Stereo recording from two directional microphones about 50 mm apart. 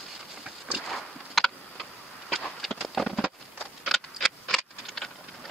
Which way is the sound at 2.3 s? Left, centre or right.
Centre.